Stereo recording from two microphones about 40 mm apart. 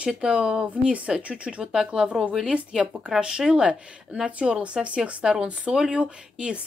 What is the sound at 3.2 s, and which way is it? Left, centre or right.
Speech, centre.